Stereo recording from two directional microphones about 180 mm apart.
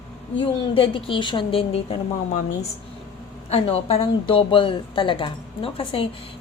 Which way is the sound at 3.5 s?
35° left (ahead or behind).